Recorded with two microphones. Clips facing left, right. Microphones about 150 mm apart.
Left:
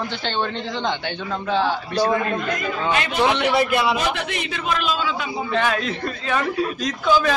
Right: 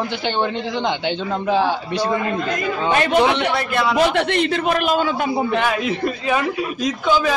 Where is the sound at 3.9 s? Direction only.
60° right (ahead or behind).